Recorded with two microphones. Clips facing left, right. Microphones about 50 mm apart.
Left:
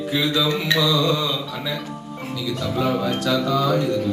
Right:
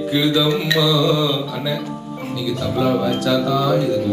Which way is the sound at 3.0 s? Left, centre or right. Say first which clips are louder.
Right 3 dB; left.